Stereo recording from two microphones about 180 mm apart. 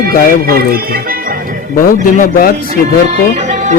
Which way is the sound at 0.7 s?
55° right (ahead or behind).